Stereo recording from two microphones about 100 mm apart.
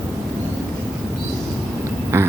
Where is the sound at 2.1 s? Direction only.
25° right (ahead or behind).